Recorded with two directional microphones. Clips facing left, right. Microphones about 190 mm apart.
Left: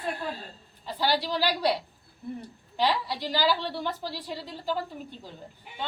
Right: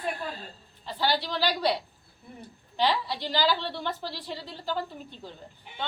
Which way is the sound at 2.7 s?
10° left (ahead or behind).